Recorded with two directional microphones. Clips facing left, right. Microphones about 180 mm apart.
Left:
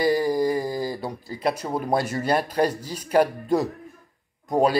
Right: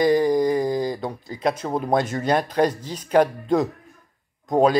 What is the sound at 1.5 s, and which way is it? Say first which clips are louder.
Speech: right 2 dB; 25° right (ahead or behind).